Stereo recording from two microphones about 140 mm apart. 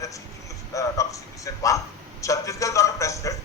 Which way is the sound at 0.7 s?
25° left (ahead or behind).